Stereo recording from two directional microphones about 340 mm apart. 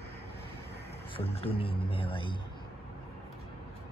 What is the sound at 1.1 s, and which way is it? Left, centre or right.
Speech, centre.